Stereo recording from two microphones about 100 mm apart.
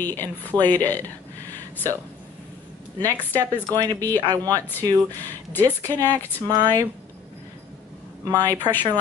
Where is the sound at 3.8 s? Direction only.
35° right (ahead or behind).